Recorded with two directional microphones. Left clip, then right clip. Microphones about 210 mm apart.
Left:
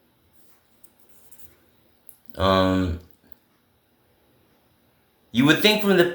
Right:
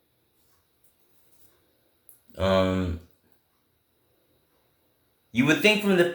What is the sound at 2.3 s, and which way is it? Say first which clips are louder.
Speech: left 3 dB; 15° left (ahead or behind).